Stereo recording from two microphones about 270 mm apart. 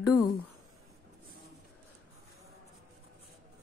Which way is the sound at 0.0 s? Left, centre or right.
Centre.